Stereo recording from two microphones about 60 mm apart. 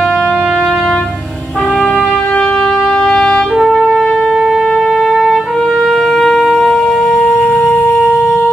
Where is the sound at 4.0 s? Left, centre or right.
Centre.